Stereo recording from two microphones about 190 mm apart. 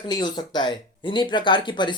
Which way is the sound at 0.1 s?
25° left (ahead or behind).